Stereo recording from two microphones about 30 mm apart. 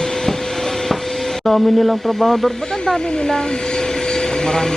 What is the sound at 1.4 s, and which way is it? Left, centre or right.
Speech, centre.